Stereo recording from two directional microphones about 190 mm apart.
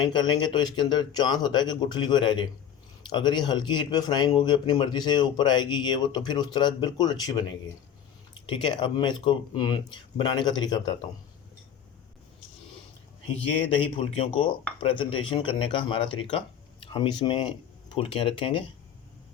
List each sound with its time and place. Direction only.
0.0 s speech: 25° left (ahead or behind)
8.4 s speech: 25° left (ahead or behind)
13.9 s speech: 30° left (ahead or behind)